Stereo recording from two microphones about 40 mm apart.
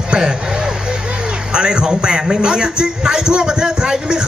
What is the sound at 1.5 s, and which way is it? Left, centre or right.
Speech, right.